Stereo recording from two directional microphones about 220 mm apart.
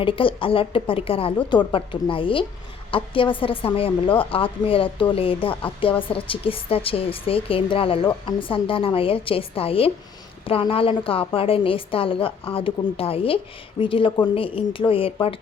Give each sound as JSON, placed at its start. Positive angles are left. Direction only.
{"t": 0.0, "sound": "a woman's voice", "side_deg": 25}